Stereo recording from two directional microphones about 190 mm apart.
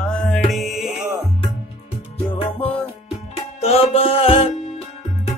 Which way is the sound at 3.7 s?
30° left (ahead or behind).